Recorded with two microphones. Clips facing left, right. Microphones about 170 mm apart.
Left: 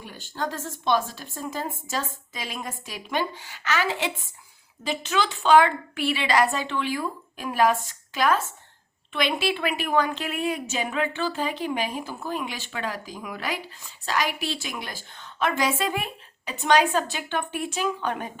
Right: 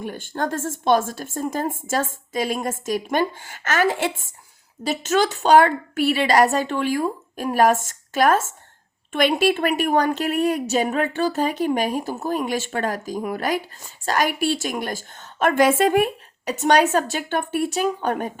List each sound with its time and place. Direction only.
0.0 s a woman's voice: 50° right (ahead or behind)